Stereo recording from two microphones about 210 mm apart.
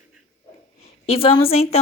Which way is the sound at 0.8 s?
25° left (ahead or behind).